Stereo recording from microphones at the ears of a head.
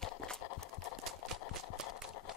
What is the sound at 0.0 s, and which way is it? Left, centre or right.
Horse, left.